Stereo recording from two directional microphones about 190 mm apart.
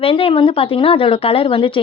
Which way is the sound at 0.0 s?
30° left (ahead or behind).